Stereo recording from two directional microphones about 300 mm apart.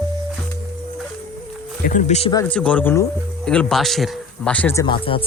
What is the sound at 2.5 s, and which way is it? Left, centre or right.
Speech, centre.